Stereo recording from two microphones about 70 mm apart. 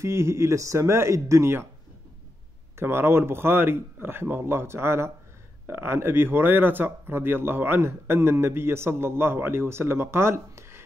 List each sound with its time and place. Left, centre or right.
0.0 s speech: right
2.8 s speech: right